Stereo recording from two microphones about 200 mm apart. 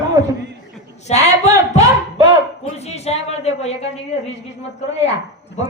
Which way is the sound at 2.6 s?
30° left (ahead or behind).